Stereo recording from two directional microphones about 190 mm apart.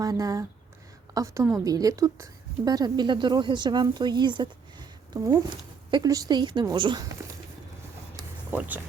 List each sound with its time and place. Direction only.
0.0 s a woman's voice: 20° right (ahead or behind)
8.5 s speech: 10° right (ahead or behind)